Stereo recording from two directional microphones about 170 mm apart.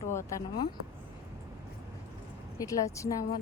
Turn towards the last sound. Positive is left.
turn(degrees=20)  # may be behind; listen again after turning